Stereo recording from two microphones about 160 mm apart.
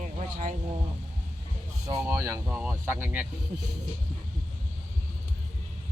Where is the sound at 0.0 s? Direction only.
50° right (ahead or behind).